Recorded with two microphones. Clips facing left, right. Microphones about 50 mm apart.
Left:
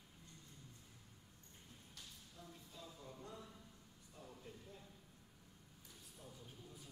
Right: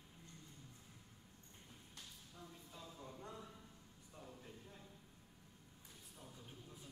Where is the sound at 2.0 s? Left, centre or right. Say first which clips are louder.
Right 2 dB; centre.